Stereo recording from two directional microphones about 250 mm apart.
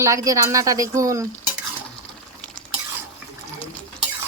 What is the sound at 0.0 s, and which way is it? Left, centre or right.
Speech, centre.